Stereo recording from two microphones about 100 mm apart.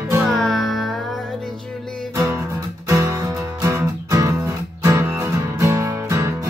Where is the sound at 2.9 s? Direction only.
30° right (ahead or behind).